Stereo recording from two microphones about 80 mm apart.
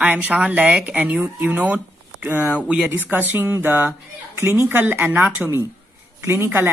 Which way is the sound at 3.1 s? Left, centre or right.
Right.